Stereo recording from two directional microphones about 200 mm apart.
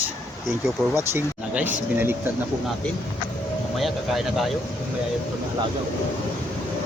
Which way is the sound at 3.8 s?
Centre (ahead or behind).